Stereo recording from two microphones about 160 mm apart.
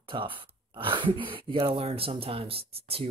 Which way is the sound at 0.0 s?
35° right (ahead or behind).